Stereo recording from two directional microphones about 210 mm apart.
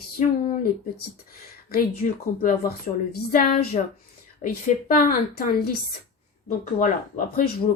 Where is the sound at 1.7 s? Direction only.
40° left (ahead or behind).